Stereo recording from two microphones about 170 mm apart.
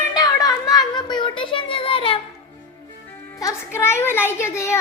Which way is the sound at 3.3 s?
15° left (ahead or behind).